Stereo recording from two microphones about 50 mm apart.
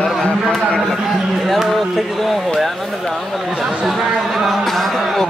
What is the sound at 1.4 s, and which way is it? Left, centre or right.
A man's voice, centre.